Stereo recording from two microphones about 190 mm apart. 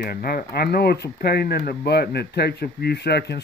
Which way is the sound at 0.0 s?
50° left (ahead or behind).